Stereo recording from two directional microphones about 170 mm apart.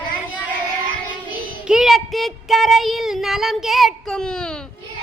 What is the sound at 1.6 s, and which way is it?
Child singing, 5° right (ahead or behind).